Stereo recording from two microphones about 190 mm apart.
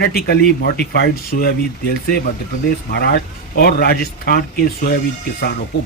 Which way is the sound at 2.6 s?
55° left (ahead or behind).